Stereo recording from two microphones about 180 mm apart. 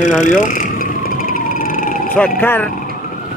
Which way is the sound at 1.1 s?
50° left (ahead or behind).